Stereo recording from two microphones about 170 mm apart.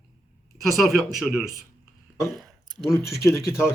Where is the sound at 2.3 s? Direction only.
Centre (ahead or behind).